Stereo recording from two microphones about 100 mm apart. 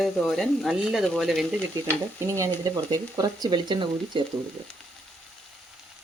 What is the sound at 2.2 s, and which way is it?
Speech, 30° right (ahead or behind).